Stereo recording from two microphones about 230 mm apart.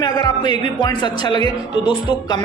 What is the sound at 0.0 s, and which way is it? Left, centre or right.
Music, centre.